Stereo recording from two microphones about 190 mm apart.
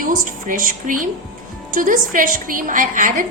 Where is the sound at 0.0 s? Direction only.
45° right (ahead or behind).